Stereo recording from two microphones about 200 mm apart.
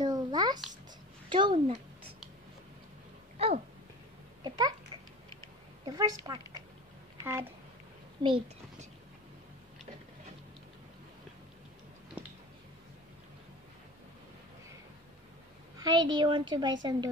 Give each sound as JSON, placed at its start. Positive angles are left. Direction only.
{"t": 0.0, "sound": "babbling", "side_deg": -20}
{"t": 1.3, "sound": "a woman's voice", "side_deg": -25}
{"t": 3.3, "sound": "a sound", "side_deg": -30}
{"t": 4.4, "sound": "a child's voice", "side_deg": -20}
{"t": 5.9, "sound": "a woman's voice", "side_deg": -20}
{"t": 15.8, "sound": "a woman's voice", "side_deg": -20}